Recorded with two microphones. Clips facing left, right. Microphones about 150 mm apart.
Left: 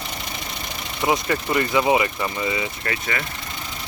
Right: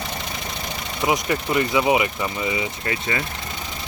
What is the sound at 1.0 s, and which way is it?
Speech, 15° right (ahead or behind).